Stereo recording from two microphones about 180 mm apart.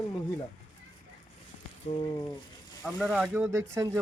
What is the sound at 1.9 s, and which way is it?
Speech, 30° left (ahead or behind).